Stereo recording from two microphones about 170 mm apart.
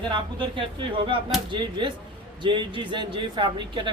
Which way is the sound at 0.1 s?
30° right (ahead or behind).